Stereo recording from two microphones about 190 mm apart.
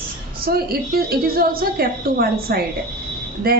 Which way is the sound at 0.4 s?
55° right (ahead or behind).